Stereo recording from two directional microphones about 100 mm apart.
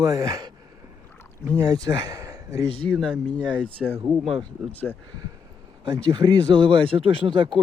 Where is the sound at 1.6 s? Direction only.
40° right (ahead or behind).